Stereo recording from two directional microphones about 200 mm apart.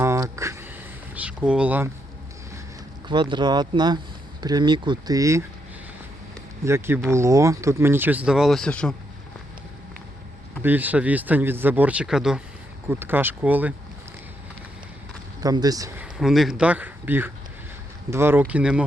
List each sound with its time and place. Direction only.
0.0 s a sound: 15° right (ahead or behind)
3.1 s speech: 25° right (ahead or behind)
6.7 s speech: 10° right (ahead or behind); by 9.0 s 5° left (ahead or behind)
10.6 s speech: 10° right (ahead or behind)
15.4 s speech: 20° right (ahead or behind)
16.0 s speech: 5° right (ahead or behind)